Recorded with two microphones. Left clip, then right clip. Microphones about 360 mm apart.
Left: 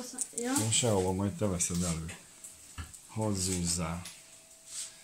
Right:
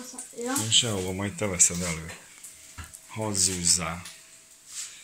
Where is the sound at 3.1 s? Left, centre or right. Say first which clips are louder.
Right 6 dB; centre.